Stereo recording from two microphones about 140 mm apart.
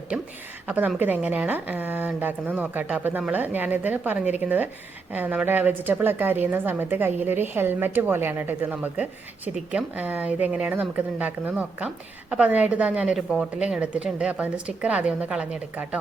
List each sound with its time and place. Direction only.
0.7 s a woman's voice: 10° right (ahead or behind)